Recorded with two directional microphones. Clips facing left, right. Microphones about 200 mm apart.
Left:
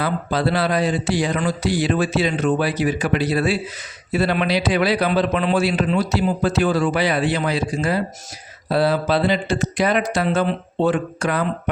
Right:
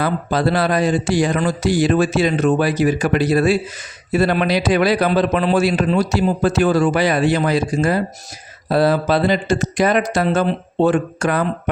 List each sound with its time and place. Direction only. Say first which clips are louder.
0.0 s a man's voice: right 3 dB; 45° right (ahead or behind)